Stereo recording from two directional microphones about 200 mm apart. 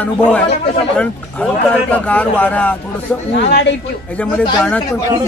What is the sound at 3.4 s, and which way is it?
Speech, 60° left (ahead or behind).